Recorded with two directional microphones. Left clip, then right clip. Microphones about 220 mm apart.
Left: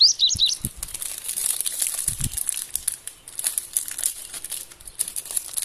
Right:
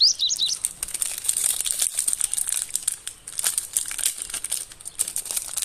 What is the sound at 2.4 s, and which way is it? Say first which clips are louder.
Crumpling: right 3 dB; 10° right (ahead or behind).